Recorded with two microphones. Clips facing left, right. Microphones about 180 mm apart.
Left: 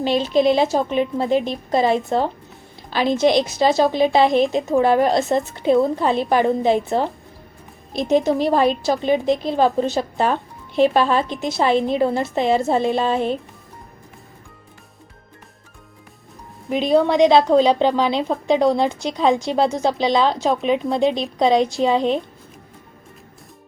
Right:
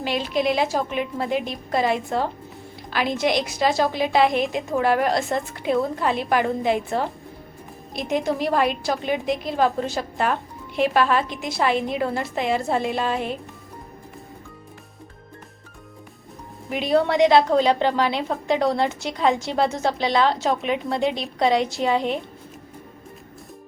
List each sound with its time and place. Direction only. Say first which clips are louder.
0.0 s a woman's voice: left 6 dB; 25° left (ahead or behind)
16.7 s a woman's voice: left 4 dB; 20° left (ahead or behind)